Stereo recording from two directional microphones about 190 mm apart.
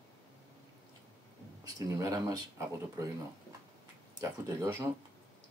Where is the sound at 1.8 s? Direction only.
15° right (ahead or behind).